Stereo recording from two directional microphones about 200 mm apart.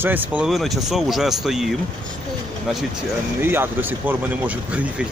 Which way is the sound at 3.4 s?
10° right (ahead or behind).